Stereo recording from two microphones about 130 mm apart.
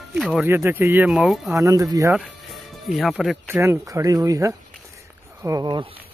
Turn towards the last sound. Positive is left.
turn(degrees=-35)  # may be behind; listen again after turning